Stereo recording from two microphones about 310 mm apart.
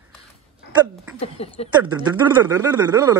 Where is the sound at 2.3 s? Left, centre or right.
Centre.